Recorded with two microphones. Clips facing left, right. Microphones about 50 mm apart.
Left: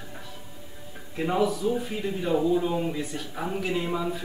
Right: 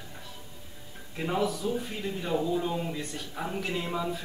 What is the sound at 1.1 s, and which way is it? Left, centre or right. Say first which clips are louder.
Speech: left 4 dB; centre.